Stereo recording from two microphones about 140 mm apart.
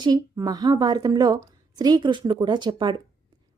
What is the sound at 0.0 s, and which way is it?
A woman's voice, 30° right (ahead or behind).